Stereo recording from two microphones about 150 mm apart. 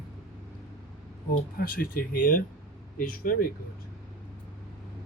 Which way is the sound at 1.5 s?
75° left (ahead or behind).